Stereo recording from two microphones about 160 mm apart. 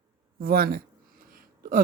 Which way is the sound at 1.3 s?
65° right (ahead or behind).